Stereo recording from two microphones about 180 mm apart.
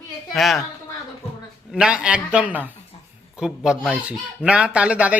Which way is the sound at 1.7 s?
5° right (ahead or behind).